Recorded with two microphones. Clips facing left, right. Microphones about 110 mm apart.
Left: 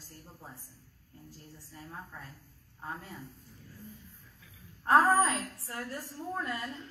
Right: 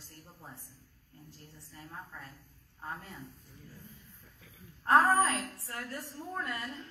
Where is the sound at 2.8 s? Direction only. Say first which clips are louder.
Left 1 dB; centre (ahead or behind).